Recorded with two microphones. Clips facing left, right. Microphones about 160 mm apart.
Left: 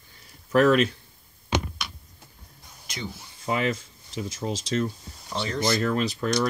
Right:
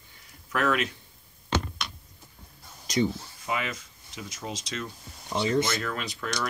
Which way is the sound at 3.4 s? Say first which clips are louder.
Left 6 dB; 35° left (ahead or behind).